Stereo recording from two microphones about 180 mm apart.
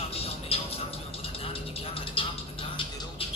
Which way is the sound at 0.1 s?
35° left (ahead or behind).